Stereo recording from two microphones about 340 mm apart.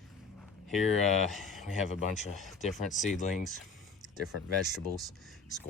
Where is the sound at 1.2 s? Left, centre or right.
Centre.